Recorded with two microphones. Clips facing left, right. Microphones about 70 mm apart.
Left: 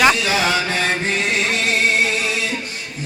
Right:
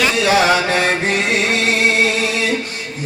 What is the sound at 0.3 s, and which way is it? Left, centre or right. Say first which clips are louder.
Mantra: right 5 dB; right.